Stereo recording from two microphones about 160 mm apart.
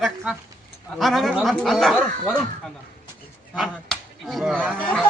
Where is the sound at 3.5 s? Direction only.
Centre (ahead or behind).